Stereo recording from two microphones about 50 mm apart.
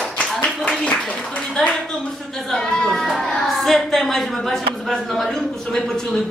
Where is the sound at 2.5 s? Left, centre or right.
Centre.